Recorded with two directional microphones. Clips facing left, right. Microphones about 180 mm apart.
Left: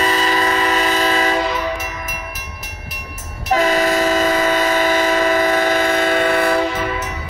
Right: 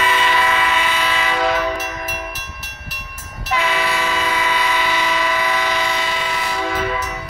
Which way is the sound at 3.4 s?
40° left (ahead or behind).